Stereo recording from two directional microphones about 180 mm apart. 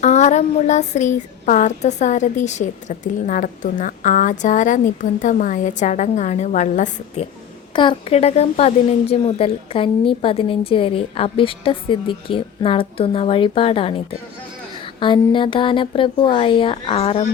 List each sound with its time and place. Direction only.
0.0 s a woman's voice: 40° left (ahead or behind)
7.8 s a woman's voice: 30° left (ahead or behind)
15.0 s speech: 25° left (ahead or behind)